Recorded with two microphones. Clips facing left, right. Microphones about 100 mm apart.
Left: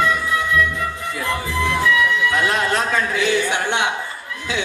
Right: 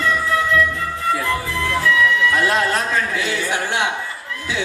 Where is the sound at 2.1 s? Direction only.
20° left (ahead or behind).